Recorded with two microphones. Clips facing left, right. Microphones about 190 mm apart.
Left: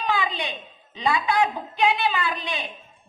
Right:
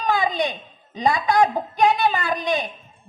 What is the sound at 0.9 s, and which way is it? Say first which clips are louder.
A woman's voice: right 4 dB; 40° right (ahead or behind).